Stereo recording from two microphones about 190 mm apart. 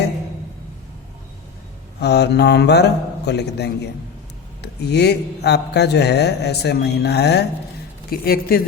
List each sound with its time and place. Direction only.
2.0 s a woman's voice: 60° left (ahead or behind)